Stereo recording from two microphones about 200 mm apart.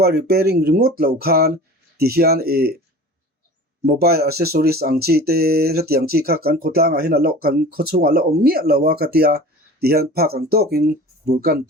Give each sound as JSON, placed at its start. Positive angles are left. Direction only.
{"t": 0.0, "sound": "speech", "side_deg": -50}
{"t": 3.9, "sound": "speech", "side_deg": -50}